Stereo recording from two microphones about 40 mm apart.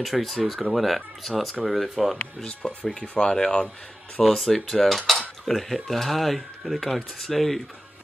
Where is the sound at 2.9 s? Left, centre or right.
Centre.